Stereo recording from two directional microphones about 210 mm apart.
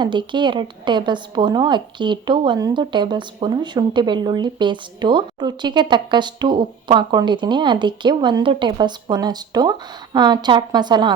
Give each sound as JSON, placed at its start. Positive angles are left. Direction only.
{"t": 0.0, "sound": "a woman's voice", "side_deg": -20}